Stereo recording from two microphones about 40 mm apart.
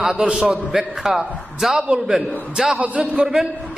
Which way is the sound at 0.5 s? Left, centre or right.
Centre.